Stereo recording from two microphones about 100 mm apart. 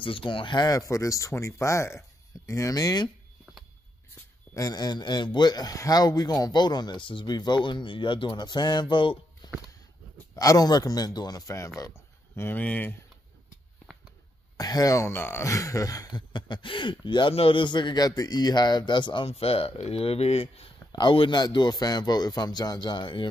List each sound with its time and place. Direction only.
0.0 s speech: 60° left (ahead or behind)
0.7 s speech: 35° left (ahead or behind)
4.6 s a man's voice: 40° left (ahead or behind); by 9.5 s 55° left (ahead or behind)
10.3 s speech: 35° left (ahead or behind); by 12.9 s 15° left (ahead or behind)
14.6 s speech: 40° left (ahead or behind); by 15.4 s 25° left (ahead or behind)
15.4 s a man's voice: 35° left (ahead or behind); by 19.2 s 50° left (ahead or behind)
19.2 s speech: 75° left (ahead or behind)
20.9 s a man's voice: 55° left (ahead or behind)